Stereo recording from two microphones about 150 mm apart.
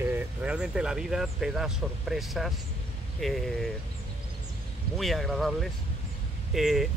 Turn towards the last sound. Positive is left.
turn(degrees=0)  # may be behind; listen again after turning